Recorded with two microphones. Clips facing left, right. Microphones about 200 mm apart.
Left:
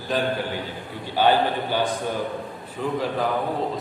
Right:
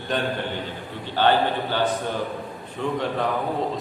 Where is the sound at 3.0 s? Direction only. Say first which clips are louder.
Left 1 dB; centre (ahead or behind).